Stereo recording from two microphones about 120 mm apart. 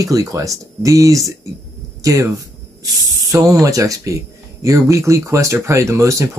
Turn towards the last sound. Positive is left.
turn(degrees=-25)  # may be behind; listen again after turning